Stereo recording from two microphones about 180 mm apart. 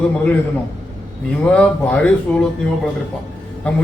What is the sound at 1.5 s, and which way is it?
Speech, 5° left (ahead or behind).